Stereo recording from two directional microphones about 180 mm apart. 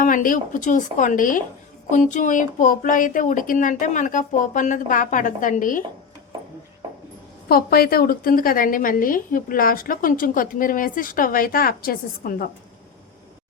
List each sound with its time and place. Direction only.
0.0 s a woman's voice: 50° left (ahead or behind)
7.4 s a woman's voice: 55° left (ahead or behind)